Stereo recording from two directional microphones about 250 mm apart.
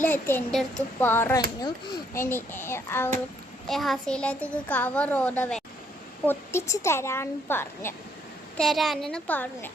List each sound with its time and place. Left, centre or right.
0.0 s a child's voice: centre